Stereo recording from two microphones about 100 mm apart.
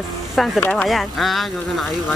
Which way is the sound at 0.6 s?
20° left (ahead or behind).